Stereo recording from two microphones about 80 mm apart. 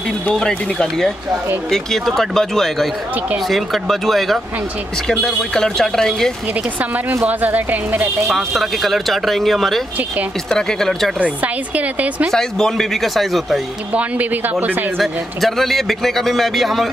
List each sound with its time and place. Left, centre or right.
0.3 s a man's voice: centre
7.2 s speech: right
8.3 s a man's voice: centre
11.1 s speech: centre
12.3 s a man's voice: centre
13.9 s speech: right
15.0 s a man's voice: centre